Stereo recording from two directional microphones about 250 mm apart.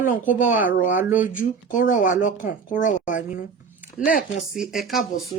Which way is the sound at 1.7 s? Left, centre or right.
Left.